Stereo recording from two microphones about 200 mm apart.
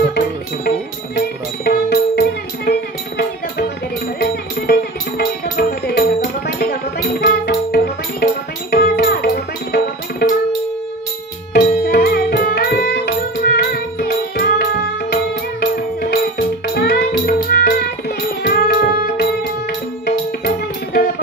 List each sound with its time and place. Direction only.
0.7 s music: 50° left (ahead or behind)
11.5 s music: 55° left (ahead or behind)
15.6 s music: 45° left (ahead or behind)